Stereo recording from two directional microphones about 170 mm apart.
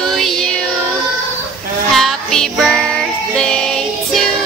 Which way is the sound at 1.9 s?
Centre (ahead or behind).